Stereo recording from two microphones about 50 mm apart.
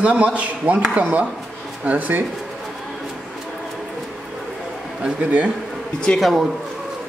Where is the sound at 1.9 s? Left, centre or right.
Right.